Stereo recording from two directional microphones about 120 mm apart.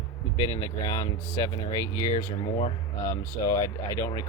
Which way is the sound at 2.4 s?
50° left (ahead or behind).